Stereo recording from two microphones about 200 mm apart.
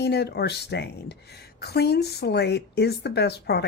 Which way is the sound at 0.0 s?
55° left (ahead or behind).